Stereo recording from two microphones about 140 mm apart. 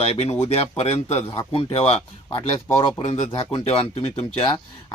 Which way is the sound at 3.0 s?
50° left (ahead or behind).